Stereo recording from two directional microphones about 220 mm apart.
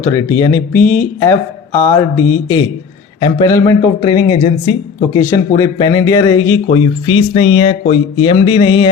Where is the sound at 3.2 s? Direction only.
20° left (ahead or behind).